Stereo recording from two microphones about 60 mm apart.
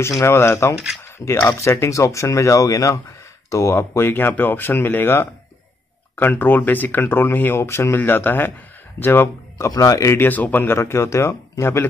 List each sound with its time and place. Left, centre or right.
0.3 s speech: left
3.7 s speech: left
7.6 s speech: left
9.7 s speech: left
10.2 s speech: left